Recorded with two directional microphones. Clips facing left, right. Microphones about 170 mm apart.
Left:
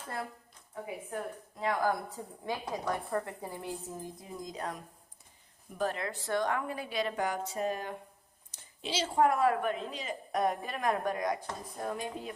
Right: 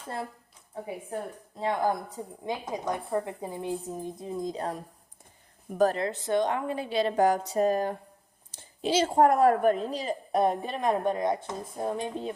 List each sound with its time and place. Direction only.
0.7 s a woman's voice: 30° right (ahead or behind)
6.1 s a woman's voice: 20° right (ahead or behind)